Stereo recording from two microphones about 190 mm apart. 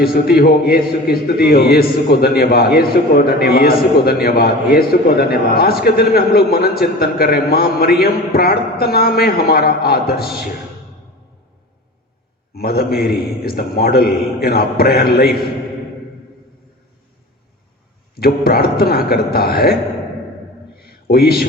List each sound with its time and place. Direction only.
0.0 s a man's voice: 55° left (ahead or behind)
12.5 s a man's voice: 55° left (ahead or behind)
18.2 s a man's voice: 55° left (ahead or behind)
20.7 s a sound: 55° left (ahead or behind)